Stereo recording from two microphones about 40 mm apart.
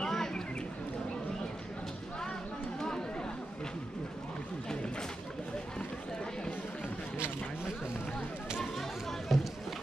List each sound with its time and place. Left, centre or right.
0.0 s a sound: centre
2.8 s chatter: centre
9.3 s speech: centre